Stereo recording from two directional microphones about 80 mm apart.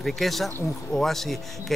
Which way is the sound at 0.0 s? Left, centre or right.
Centre.